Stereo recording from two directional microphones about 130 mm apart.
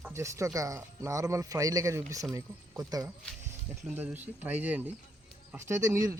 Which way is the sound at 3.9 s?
10° right (ahead or behind).